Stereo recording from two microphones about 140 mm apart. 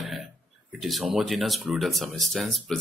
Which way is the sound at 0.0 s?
Centre (ahead or behind).